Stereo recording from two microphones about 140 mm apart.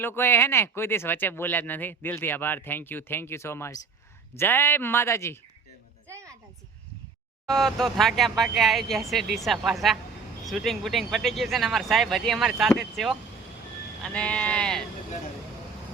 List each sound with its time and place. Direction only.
0.0 s speech: 15° left (ahead or behind)
6.1 s a sound: 20° right (ahead or behind)
7.4 s speech: centre (ahead or behind)